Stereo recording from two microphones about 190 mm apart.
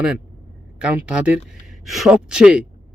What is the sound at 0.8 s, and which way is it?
Speech, 5° right (ahead or behind).